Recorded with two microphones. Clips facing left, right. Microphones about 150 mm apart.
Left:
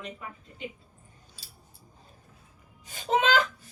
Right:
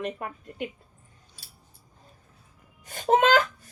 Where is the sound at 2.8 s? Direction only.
50° right (ahead or behind).